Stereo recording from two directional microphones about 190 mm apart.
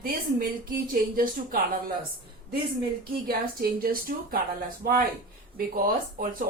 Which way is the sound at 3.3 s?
50° right (ahead or behind).